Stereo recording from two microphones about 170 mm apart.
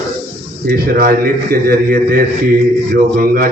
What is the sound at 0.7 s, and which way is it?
A man's voice, 60° right (ahead or behind).